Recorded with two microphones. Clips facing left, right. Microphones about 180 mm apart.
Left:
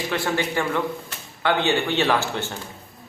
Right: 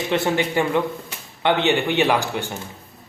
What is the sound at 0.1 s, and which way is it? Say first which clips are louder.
A man's voice: right 5 dB; 20° right (ahead or behind).